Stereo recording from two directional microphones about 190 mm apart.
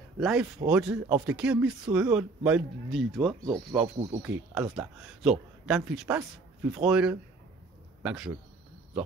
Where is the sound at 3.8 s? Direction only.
35° right (ahead or behind).